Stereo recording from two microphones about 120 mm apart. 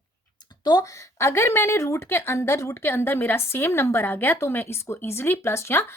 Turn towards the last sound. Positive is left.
turn(degrees=20)  # may be behind; listen again after turning